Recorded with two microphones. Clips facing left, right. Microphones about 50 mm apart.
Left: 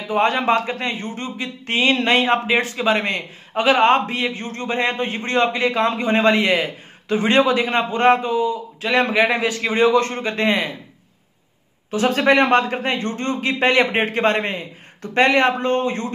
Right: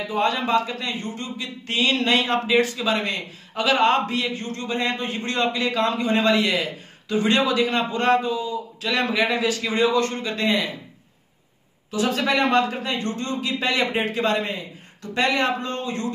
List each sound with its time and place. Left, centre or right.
0.1 s a man's voice: left
11.9 s a man's voice: left